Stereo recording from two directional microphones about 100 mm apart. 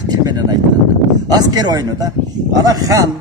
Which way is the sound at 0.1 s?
45° right (ahead or behind).